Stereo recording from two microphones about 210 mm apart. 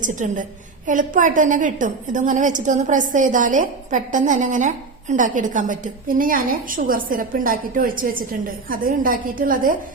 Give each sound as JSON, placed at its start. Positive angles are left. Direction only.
{"t": 0.0, "sound": "a woman's voice", "side_deg": -35}